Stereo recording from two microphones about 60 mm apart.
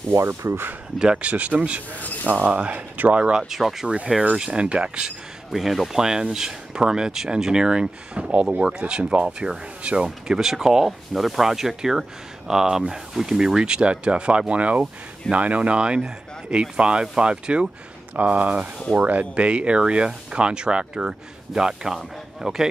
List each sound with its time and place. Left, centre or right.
0.1 s speech: right
0.9 s speech: centre
3.4 s speech: centre
4.4 s speech: centre
5.5 s speech: centre